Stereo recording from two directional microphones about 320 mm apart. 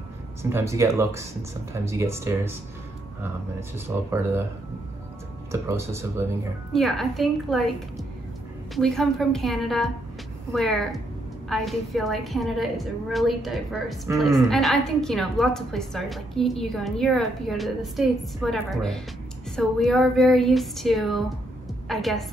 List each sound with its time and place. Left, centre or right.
0.4 s speech: centre
3.9 s speech: centre
5.5 s a woman's voice: centre
8.7 s a woman's voice: centre